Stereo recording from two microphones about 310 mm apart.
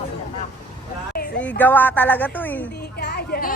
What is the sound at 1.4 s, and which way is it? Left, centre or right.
A woman's voice, centre.